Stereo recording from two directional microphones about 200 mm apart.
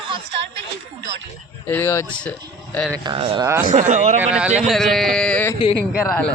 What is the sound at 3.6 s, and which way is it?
Speech, 40° right (ahead or behind).